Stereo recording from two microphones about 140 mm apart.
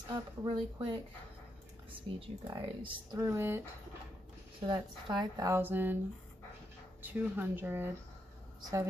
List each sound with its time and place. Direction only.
0.1 s speech: 30° right (ahead or behind)
4.6 s speech: 35° right (ahead or behind)
5.5 s speech: 15° right (ahead or behind)
7.0 s speech: 10° right (ahead or behind)
8.5 s speech: 30° right (ahead or behind)